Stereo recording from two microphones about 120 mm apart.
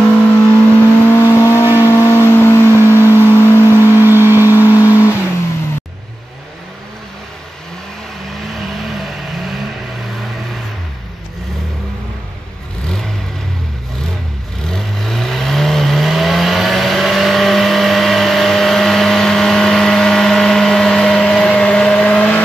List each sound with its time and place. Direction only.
0.2 s vehicle: 10° left (ahead or behind)
4.0 s vehicle: 20° right (ahead or behind)
4.7 s vehicle: 25° left (ahead or behind)
8.8 s vehicle: centre (ahead or behind)
14.7 s vehicle: 5° left (ahead or behind)